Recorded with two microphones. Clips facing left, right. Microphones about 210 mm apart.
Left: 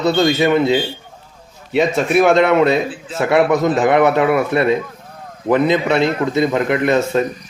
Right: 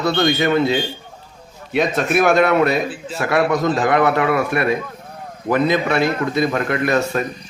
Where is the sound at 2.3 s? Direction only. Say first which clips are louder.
Left 2 dB; 20° left (ahead or behind).